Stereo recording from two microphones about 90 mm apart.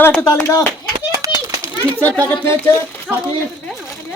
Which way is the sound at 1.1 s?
40° right (ahead or behind).